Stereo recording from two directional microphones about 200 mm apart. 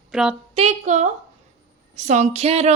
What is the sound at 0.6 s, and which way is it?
A woman's voice, 35° right (ahead or behind).